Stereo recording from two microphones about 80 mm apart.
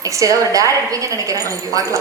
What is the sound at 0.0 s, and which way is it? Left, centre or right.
A woman's voice, right.